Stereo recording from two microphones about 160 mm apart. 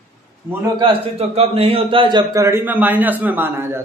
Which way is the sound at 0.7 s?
35° right (ahead or behind).